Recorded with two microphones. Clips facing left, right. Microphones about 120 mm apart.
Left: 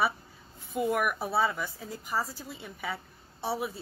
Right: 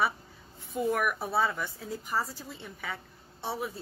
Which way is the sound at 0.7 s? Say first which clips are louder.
Left 1 dB; 5° left (ahead or behind).